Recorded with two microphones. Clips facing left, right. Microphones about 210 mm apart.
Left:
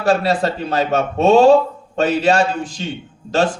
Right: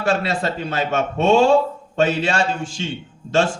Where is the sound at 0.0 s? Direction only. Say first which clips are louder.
Left 4 dB; 35° left (ahead or behind).